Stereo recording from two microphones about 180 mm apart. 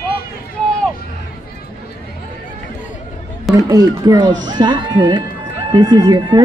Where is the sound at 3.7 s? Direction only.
20° right (ahead or behind).